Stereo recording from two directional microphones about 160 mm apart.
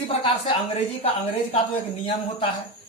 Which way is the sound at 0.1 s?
35° left (ahead or behind).